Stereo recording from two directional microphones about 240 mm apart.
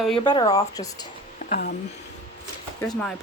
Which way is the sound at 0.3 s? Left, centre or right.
Centre.